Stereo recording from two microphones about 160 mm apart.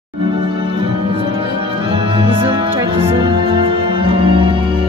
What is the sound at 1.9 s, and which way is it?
Music, 35° right (ahead or behind).